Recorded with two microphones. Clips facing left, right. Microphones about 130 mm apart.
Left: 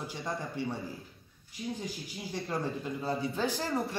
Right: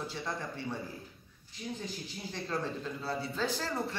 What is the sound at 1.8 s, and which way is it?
Speech, 15° left (ahead or behind).